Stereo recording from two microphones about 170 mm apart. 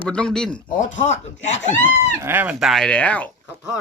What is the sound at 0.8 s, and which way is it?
Speech, 45° left (ahead or behind).